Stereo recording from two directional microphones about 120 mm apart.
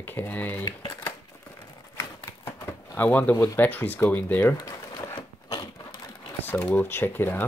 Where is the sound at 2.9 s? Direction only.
10° left (ahead or behind).